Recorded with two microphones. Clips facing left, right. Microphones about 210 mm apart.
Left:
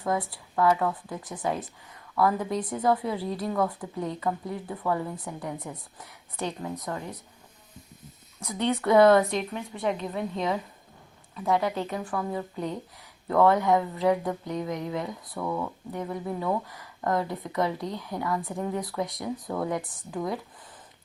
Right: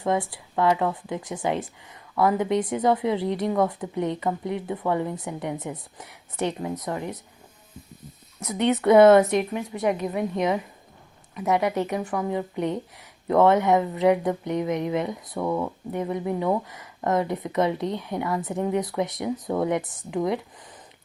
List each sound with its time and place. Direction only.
0.5 s a woman's voice: 20° right (ahead or behind)
2.6 s a woman's voice: 90° right
2.8 s a woman's voice: 20° right (ahead or behind)
8.4 s a woman's voice: 20° right (ahead or behind)